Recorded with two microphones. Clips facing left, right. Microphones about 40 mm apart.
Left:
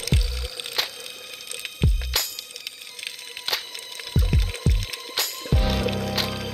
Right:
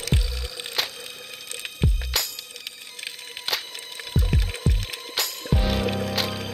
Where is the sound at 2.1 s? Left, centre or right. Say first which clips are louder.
Even; centre.